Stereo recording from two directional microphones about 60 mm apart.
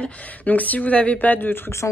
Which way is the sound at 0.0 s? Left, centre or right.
Left.